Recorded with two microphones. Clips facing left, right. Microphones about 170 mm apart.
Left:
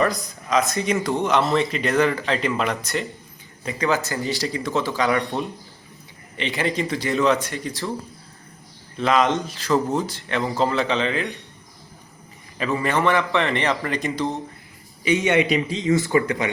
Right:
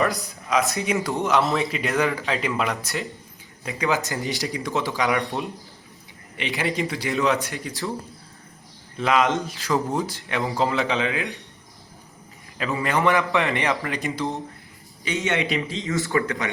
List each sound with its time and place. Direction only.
0.8 s speech: 5° right (ahead or behind)
5.2 s speech: centre (ahead or behind)
9.0 s speech: 10° right (ahead or behind)
12.9 s speech: 15° right (ahead or behind)
15.0 s speech: 15° left (ahead or behind)